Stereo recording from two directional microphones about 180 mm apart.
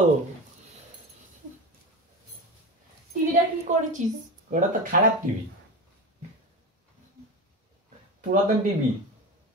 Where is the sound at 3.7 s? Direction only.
40° right (ahead or behind).